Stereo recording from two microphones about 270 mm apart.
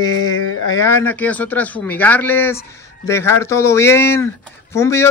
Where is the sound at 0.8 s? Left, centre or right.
Centre.